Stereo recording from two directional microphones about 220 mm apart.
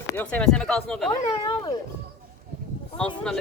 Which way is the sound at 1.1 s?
25° left (ahead or behind).